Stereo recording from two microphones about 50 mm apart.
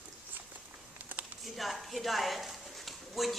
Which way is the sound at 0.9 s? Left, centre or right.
Right.